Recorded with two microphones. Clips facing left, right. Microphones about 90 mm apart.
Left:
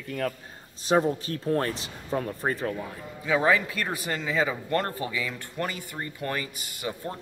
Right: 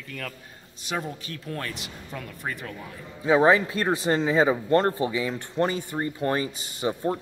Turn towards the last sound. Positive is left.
turn(degrees=-25)  # may be behind; listen again after turning